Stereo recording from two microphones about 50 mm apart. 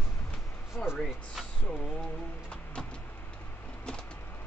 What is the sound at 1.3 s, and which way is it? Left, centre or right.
Speech, centre.